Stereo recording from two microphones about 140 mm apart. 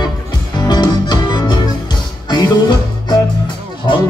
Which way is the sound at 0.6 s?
30° left (ahead or behind).